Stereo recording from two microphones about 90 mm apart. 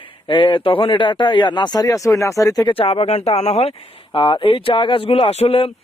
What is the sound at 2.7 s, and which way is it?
Speech, 85° left.